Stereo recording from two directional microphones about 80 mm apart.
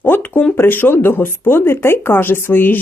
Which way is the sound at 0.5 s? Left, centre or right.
Left.